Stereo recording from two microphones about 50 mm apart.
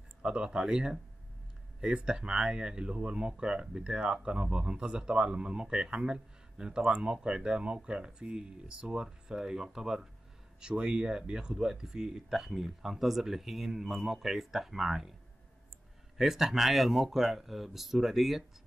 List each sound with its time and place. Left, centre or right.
0.2 s speech: centre
2.0 s speech: centre
16.2 s speech: centre